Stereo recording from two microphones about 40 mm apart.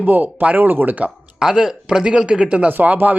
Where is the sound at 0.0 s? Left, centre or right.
Right.